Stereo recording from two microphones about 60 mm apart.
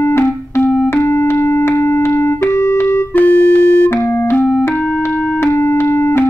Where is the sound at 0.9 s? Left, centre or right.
Left.